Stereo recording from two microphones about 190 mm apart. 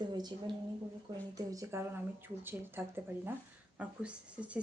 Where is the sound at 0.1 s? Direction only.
20° right (ahead or behind).